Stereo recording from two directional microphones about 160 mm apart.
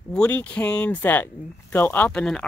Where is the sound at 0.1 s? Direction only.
10° left (ahead or behind).